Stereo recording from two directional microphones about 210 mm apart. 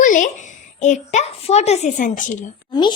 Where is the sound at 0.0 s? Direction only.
40° left (ahead or behind).